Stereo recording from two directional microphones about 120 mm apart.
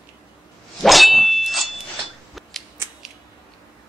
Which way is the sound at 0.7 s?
Centre (ahead or behind).